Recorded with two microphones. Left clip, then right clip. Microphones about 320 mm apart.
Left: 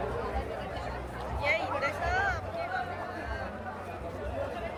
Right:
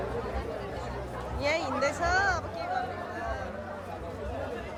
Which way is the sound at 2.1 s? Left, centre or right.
Centre.